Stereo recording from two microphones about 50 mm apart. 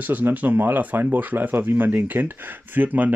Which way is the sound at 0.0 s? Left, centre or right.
Right.